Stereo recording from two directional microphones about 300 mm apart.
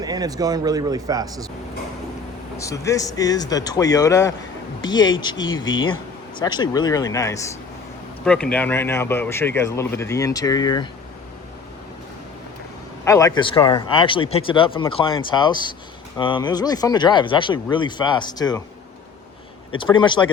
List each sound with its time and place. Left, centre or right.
0.0 s speech: centre
2.6 s speech: centre
13.1 s speech: centre
19.8 s speech: centre